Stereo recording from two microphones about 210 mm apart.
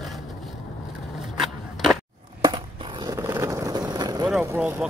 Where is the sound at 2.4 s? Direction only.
20° right (ahead or behind).